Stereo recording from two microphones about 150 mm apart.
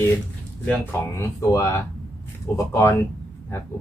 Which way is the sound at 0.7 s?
15° left (ahead or behind).